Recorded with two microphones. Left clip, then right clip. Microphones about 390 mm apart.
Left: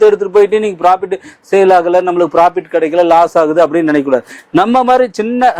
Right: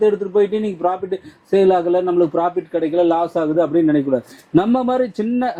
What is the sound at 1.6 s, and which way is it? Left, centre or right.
A man's voice, centre.